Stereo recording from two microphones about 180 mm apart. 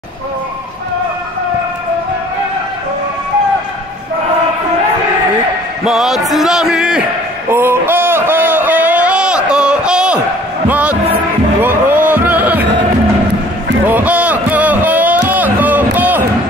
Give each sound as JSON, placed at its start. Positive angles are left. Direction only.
{"t": 5.9, "sound": "music", "side_deg": 0}
{"t": 7.4, "sound": "a sound", "side_deg": -10}
{"t": 10.7, "sound": "basketball bounce", "side_deg": -5}
{"t": 11.6, "sound": "music", "side_deg": -10}
{"t": 13.8, "sound": "music", "side_deg": -10}